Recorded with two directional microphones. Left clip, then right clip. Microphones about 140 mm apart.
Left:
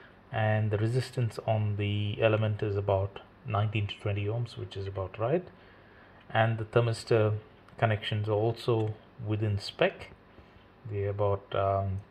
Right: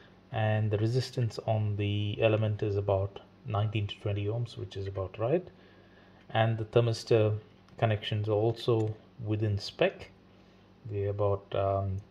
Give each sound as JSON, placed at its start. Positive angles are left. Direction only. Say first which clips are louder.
{"t": 0.3, "sound": "speech", "louder": "left 1 dB", "side_deg": -20}
{"t": 2.8, "sound": "speech", "louder": "left 2 dB", "side_deg": -10}
{"t": 6.4, "sound": "speech", "louder": "right 1 dB", "side_deg": -20}
{"t": 10.9, "sound": "speech", "louder": "even", "side_deg": -15}